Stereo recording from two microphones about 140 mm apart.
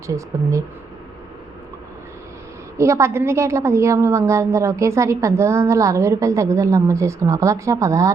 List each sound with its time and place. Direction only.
2.7 s a woman's voice: 20° right (ahead or behind)